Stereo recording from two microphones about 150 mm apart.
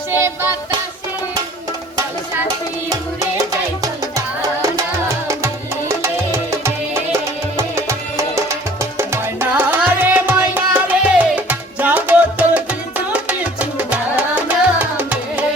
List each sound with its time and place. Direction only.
0.1 s music: 15° right (ahead or behind)
4.6 s music: 20° right (ahead or behind)
6.5 s music: 20° right (ahead or behind)